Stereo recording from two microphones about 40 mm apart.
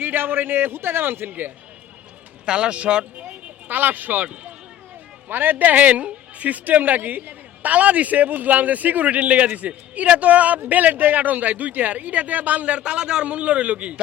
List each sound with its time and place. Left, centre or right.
0.0 s a man's voice: right
2.5 s speech: right
3.2 s a sound: right
5.3 s a man's voice: right